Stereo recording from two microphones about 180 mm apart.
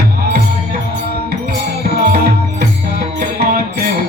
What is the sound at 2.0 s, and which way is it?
Music, 60° right (ahead or behind).